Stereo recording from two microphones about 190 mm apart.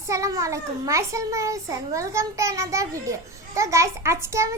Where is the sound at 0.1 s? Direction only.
15° right (ahead or behind).